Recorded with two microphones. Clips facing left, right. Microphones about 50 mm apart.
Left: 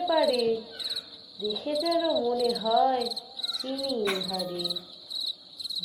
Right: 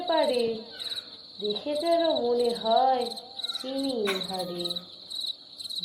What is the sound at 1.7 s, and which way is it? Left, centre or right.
Speech, centre.